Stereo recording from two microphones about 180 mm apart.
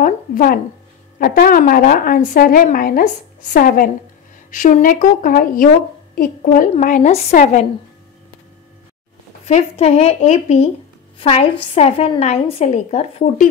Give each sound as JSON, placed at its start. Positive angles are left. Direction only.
{"t": 0.0, "sound": "a sound", "side_deg": 50}
{"t": 1.2, "sound": "a woman's voice", "side_deg": 55}
{"t": 9.5, "sound": "a woman's voice", "side_deg": 35}